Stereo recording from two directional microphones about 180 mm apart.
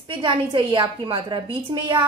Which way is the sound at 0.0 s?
30° right (ahead or behind).